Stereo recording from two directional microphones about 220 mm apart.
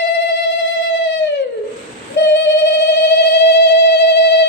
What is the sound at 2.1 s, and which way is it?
Telephone, 55° left (ahead or behind).